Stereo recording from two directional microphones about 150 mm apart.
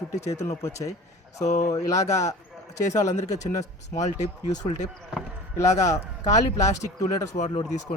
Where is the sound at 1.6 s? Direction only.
20° left (ahead or behind).